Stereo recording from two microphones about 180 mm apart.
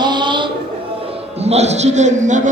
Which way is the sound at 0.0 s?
25° right (ahead or behind).